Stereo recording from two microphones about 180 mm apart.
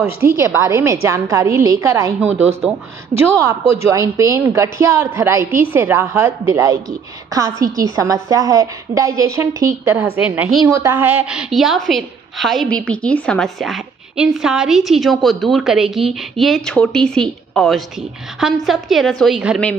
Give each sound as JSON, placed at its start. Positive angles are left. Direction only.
{"t": 0.0, "sound": "a woman's voice", "side_deg": -15}
{"t": 10.6, "sound": "a woman's voice", "side_deg": -20}